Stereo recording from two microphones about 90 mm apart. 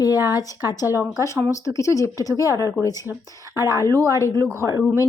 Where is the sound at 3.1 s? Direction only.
25° right (ahead or behind).